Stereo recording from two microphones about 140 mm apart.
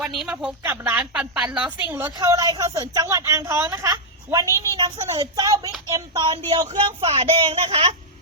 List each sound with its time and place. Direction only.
0.0 s a woman's voice: 5° right (ahead or behind)
0.6 s a woman's voice: 15° right (ahead or behind)
2.0 s speech: 25° right (ahead or behind)
6.7 s speech: 45° right (ahead or behind)